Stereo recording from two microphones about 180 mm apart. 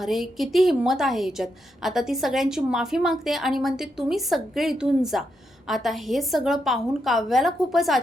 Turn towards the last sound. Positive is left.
turn(degrees=0)  # may be behind; listen again after turning